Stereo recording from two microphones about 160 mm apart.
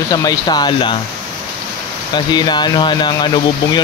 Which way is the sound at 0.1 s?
25° left (ahead or behind).